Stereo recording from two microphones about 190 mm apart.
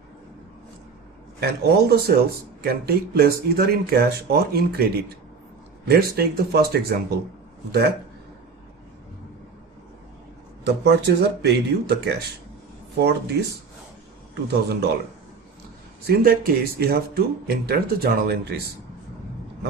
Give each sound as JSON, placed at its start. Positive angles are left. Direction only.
{"t": 1.4, "sound": "speech", "side_deg": -55}
{"t": 5.9, "sound": "speech", "side_deg": -55}
{"t": 10.6, "sound": "speech", "side_deg": -60}
{"t": 14.5, "sound": "speech", "side_deg": -60}
{"t": 16.0, "sound": "speech", "side_deg": -55}